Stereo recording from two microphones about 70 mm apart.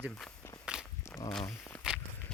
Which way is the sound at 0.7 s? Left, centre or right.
Centre.